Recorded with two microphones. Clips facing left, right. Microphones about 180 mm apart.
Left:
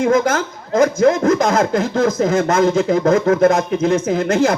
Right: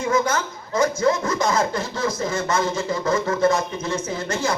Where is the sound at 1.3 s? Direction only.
55° left (ahead or behind).